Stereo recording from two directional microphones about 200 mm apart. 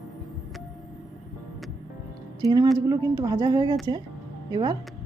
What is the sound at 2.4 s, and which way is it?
A woman's voice, 15° right (ahead or behind).